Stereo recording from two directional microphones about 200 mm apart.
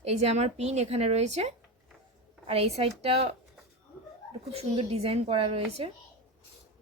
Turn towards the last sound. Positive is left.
turn(degrees=-30)  # may be behind; listen again after turning